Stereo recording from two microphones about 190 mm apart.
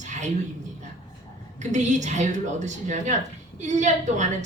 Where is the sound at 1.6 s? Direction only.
40° right (ahead or behind).